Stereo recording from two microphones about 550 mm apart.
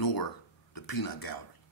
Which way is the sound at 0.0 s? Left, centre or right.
Left.